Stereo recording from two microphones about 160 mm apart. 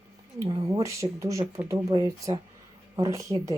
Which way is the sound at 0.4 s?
20° right (ahead or behind).